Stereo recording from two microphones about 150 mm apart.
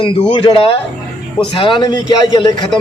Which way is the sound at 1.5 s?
35° left (ahead or behind).